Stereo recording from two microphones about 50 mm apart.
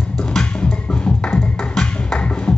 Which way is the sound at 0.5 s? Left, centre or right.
Left.